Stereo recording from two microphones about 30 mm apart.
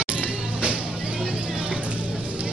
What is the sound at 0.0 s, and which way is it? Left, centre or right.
Music, right.